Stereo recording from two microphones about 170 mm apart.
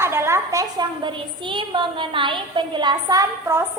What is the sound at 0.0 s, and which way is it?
A woman's voice, 15° right (ahead or behind).